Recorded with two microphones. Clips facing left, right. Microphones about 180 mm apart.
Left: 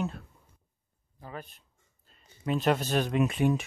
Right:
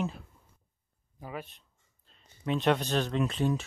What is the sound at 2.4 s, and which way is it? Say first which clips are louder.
Speech: even; 5° left (ahead or behind).